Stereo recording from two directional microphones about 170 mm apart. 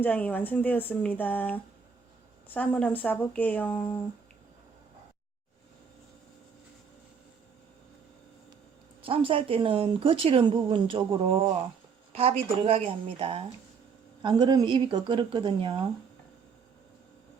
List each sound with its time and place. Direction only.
0.0 s speech: 10° left (ahead or behind)
9.0 s a woman's voice: 30° right (ahead or behind)